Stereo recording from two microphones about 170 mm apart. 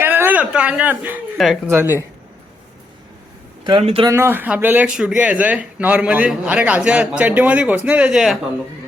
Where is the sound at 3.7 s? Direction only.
30° right (ahead or behind).